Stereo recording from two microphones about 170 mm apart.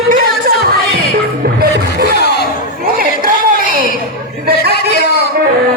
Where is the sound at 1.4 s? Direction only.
65° right (ahead or behind).